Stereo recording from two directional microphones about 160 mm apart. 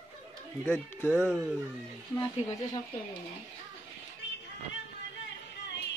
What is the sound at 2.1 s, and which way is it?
Speech, 20° left (ahead or behind).